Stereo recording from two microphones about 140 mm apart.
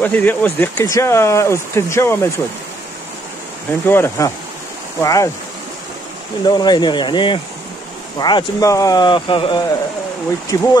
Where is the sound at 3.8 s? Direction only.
15° left (ahead or behind).